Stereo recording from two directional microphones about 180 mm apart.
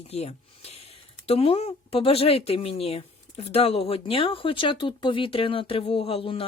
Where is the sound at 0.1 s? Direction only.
35° left (ahead or behind).